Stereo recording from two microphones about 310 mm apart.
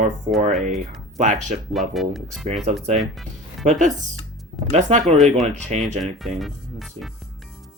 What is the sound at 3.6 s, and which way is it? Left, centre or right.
Speech, right.